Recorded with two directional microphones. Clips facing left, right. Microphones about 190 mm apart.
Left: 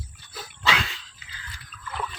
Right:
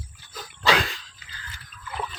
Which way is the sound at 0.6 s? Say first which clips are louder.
Right 5 dB; 40° right (ahead or behind).